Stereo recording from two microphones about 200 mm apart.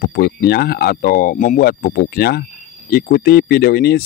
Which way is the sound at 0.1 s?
50° left (ahead or behind).